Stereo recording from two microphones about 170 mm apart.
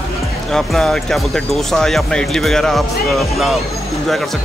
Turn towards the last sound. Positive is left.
turn(degrees=0)  # may be behind; listen again after turning